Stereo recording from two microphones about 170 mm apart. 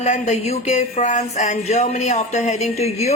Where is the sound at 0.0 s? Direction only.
40° left (ahead or behind).